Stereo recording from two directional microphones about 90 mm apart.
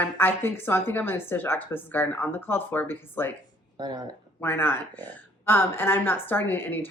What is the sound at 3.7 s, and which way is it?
Speech, 45° right (ahead or behind).